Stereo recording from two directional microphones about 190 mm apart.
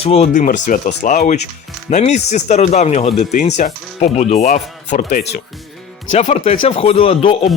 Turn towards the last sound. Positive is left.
turn(degrees=30)  # may be behind; listen again after turning